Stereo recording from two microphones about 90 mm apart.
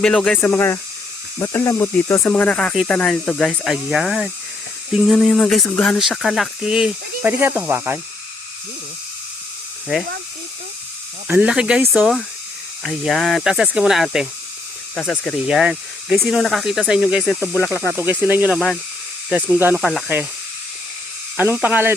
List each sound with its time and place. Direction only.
0.0 s speech: 5° left (ahead or behind)
0.4 s speech: 25° left (ahead or behind)
2.2 s speech: 15° left (ahead or behind)
6.0 s speech: centre (ahead or behind)
7.3 s speech: 25° right (ahead or behind)
11.3 s speech: 15° right (ahead or behind)
14.9 s speech: 15° left (ahead or behind)
15.4 s speech: 10° right (ahead or behind)
16.9 s speech: 10° right (ahead or behind)
17.9 s speech: 20° right (ahead or behind)
21.3 s speech: 20° right (ahead or behind)